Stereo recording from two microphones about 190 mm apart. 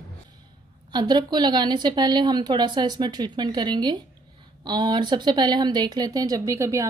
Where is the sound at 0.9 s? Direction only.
20° right (ahead or behind).